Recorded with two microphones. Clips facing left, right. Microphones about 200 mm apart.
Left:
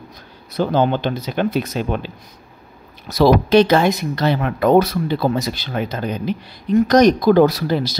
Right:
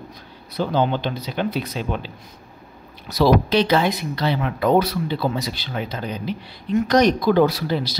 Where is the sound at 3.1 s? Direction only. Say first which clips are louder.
Left 4 dB; 50° left (ahead or behind).